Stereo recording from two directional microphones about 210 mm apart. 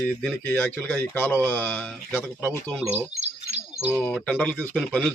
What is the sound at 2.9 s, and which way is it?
Bird, 30° right (ahead or behind).